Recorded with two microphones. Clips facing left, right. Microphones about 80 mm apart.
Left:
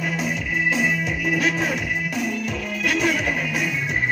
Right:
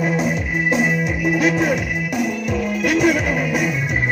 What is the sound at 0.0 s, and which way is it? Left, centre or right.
Music, right.